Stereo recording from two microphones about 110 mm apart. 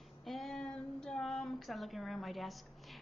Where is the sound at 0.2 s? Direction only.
Centre (ahead or behind).